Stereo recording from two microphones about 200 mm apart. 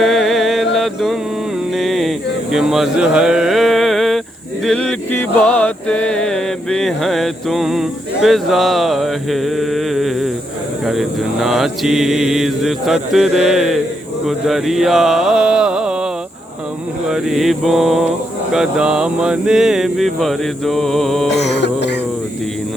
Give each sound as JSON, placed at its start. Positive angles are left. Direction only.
{"t": 0.0, "sound": "music", "side_deg": 0}
{"t": 1.7, "sound": "a sound", "side_deg": 0}
{"t": 4.6, "sound": "music", "side_deg": 5}
{"t": 17.1, "sound": "music", "side_deg": 0}
{"t": 21.4, "sound": "music", "side_deg": 60}